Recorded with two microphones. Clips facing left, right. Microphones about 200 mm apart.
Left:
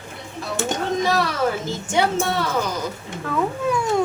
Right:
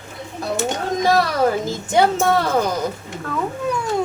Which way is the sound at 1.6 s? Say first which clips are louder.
Right 4 dB; 40° right (ahead or behind).